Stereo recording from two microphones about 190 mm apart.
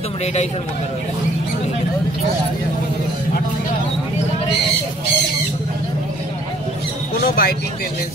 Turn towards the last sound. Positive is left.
turn(degrees=55)  # may be behind; listen again after turning